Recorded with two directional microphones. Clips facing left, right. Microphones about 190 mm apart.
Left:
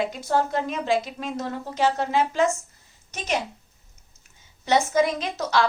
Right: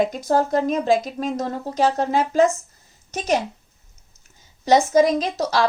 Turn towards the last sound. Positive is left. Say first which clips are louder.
# right 3 dB
turn(degrees=-35)  # may be behind; listen again after turning